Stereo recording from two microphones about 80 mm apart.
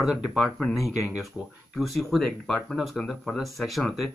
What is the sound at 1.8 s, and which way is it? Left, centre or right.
Speech, centre.